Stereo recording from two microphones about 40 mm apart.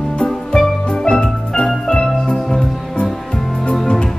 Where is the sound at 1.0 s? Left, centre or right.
Left.